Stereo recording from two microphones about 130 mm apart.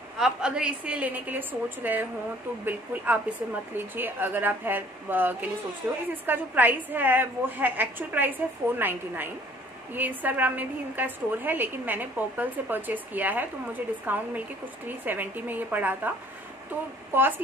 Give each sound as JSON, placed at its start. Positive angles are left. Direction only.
{"t": 0.2, "sound": "a woman's voice", "side_deg": -5}
{"t": 17.1, "sound": "a woman's voice", "side_deg": -15}